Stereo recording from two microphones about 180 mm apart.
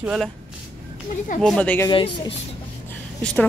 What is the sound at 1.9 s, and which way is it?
Speech, 30° left (ahead or behind).